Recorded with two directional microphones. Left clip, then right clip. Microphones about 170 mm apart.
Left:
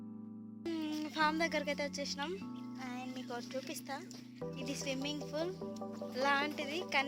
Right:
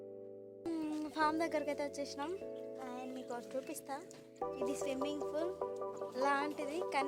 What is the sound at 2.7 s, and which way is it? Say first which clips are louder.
Music: even; centre (ahead or behind).